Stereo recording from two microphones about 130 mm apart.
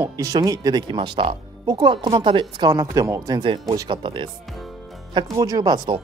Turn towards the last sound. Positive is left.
turn(degrees=-30)  # may be behind; listen again after turning